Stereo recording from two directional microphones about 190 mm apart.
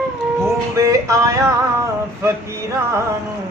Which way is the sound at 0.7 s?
15° right (ahead or behind).